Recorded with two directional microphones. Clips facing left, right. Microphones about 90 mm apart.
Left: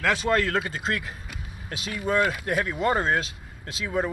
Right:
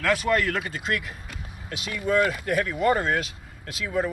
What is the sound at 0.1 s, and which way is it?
Speech, 30° left (ahead or behind).